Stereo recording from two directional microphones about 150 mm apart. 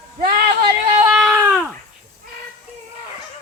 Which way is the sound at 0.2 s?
90° right.